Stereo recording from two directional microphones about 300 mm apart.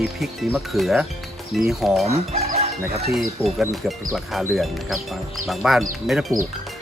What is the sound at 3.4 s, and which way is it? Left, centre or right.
Speech, centre.